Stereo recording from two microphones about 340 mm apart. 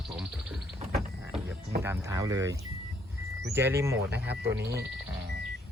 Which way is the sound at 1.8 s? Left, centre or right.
Centre.